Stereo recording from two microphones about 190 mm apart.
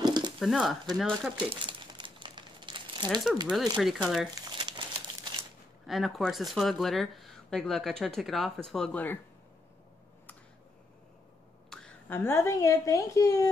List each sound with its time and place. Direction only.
0.0 s a sound: 20° right (ahead or behind)
0.4 s speech: centre (ahead or behind)
1.4 s crumpling: 25° right (ahead or behind)
3.7 s speech: centre (ahead or behind)
4.4 s crumpling: 25° right (ahead or behind)
5.9 s speech: centre (ahead or behind)
11.7 s speech: 5° left (ahead or behind)